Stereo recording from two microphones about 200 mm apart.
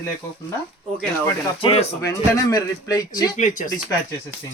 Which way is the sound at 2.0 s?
15° left (ahead or behind).